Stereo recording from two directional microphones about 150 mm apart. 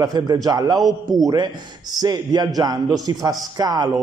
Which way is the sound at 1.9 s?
25° right (ahead or behind).